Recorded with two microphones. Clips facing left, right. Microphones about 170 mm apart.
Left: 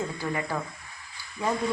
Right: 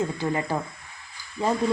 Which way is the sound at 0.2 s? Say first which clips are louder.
Right 4 dB; 25° right (ahead or behind).